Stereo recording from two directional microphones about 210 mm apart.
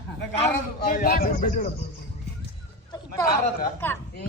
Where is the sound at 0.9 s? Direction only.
45° left (ahead or behind).